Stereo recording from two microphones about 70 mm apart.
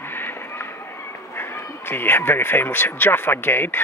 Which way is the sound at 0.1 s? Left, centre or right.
Left.